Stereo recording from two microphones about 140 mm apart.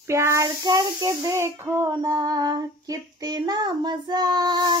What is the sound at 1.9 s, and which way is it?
Child singing, 30° right (ahead or behind).